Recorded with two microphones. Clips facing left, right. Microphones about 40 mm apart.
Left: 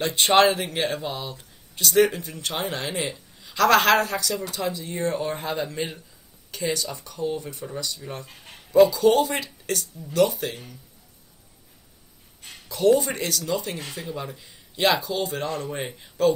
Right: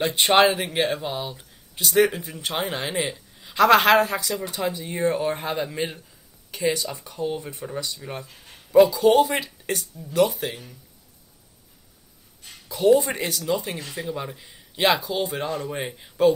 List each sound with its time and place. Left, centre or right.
0.0 s speech: centre
12.6 s speech: centre